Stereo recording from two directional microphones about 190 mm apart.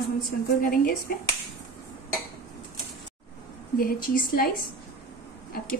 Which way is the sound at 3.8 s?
50° left (ahead or behind).